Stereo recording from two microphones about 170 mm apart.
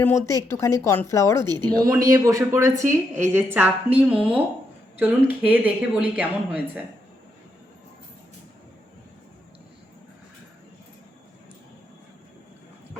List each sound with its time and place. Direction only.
0.0 s speech: 15° left (ahead or behind)
1.8 s speech: 20° right (ahead or behind)